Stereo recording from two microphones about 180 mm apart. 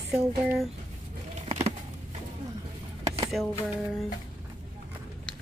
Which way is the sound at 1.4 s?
35° right (ahead or behind).